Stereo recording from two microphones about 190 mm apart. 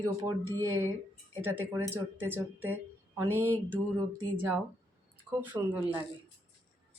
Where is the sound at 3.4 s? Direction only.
10° left (ahead or behind).